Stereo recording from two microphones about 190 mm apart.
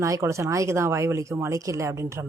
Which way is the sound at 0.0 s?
15° right (ahead or behind).